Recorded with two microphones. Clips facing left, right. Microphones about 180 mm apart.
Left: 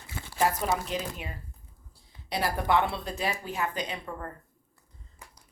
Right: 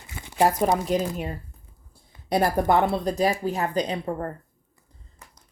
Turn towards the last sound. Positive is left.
turn(degrees=10)  # may be behind; listen again after turning